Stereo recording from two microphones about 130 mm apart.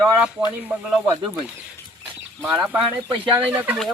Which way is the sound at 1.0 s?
35° right (ahead or behind).